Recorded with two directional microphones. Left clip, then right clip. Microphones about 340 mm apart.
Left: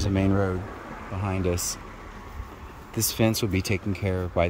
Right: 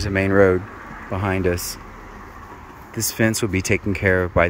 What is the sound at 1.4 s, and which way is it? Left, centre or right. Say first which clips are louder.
Speech: right 3 dB; centre.